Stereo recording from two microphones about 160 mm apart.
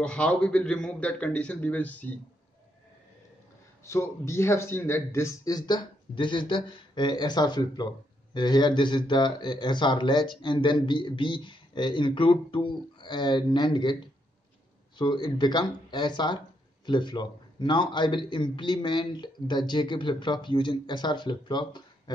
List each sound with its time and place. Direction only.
0.0 s a man's voice: 5° left (ahead or behind)
3.8 s a man's voice: 15° left (ahead or behind)